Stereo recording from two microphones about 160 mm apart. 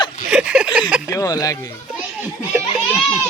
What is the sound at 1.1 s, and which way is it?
Speech, 20° left (ahead or behind).